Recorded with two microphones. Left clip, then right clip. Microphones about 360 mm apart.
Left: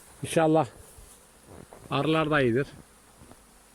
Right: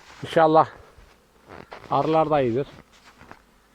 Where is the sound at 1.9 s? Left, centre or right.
Centre.